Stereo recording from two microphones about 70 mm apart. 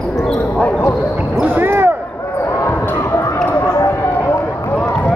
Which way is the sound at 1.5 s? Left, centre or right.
Right.